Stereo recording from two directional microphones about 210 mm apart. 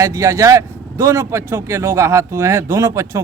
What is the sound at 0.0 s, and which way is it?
Speech, 15° right (ahead or behind).